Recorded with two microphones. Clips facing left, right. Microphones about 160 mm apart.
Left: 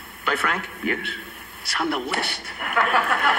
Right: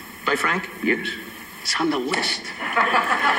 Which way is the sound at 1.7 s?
Centre (ahead or behind).